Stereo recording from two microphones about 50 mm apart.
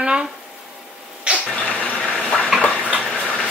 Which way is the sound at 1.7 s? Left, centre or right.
Left.